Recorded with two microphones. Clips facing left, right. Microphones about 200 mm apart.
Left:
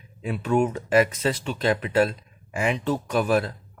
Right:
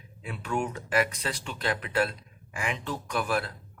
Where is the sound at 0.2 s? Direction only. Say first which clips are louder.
Left 9 dB; 20° left (ahead or behind).